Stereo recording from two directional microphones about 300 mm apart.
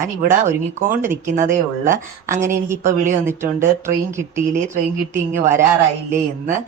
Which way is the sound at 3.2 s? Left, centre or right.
Centre.